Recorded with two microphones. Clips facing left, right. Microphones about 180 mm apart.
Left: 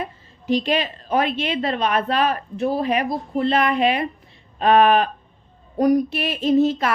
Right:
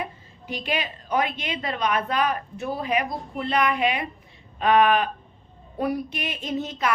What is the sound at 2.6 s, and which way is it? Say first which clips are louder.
Speech: left 6 dB; 30° left (ahead or behind).